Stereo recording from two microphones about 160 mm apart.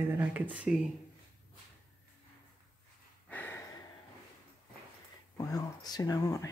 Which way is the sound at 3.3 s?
10° left (ahead or behind).